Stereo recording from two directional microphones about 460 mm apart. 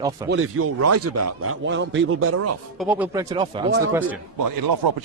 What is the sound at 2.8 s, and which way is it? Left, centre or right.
Speech, centre.